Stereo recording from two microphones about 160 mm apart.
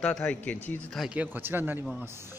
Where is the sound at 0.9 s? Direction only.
5° right (ahead or behind).